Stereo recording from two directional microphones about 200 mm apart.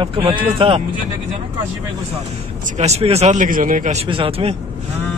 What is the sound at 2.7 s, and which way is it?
Speech, 35° right (ahead or behind).